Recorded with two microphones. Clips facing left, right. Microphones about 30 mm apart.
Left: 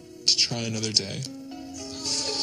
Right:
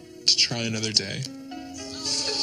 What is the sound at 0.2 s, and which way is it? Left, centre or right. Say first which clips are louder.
Music: right 2 dB; right.